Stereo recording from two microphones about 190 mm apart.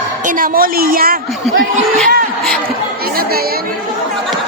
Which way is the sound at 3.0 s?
50° right (ahead or behind).